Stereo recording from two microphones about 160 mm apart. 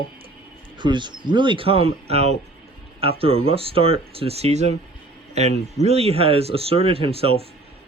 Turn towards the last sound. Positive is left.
turn(degrees=-35)  # may be behind; listen again after turning